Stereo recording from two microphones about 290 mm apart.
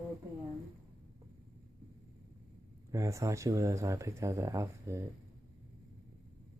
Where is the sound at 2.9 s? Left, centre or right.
Centre.